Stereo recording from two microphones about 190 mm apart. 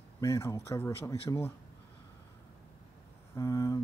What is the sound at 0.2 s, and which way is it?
Speech, 15° left (ahead or behind).